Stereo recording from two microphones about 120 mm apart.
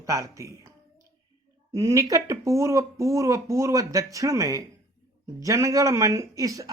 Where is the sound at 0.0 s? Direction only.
25° right (ahead or behind).